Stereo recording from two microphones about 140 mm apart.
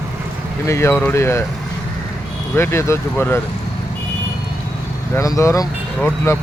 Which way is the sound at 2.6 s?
20° left (ahead or behind).